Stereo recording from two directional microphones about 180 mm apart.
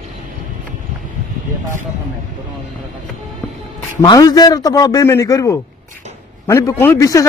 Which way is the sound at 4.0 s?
20° left (ahead or behind).